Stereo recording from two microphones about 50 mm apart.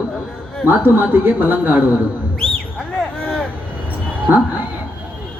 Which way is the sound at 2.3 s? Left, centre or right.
Centre.